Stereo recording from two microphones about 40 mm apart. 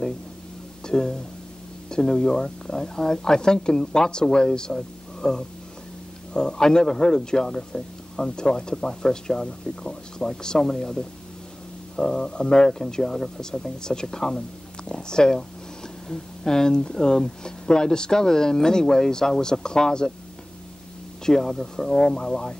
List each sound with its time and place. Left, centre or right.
0.8 s speech: centre
21.3 s speech: centre